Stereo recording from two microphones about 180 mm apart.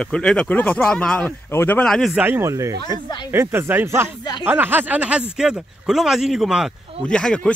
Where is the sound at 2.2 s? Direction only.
15° right (ahead or behind).